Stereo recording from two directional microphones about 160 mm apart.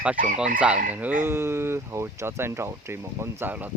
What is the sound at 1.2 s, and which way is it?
Speech, 15° right (ahead or behind).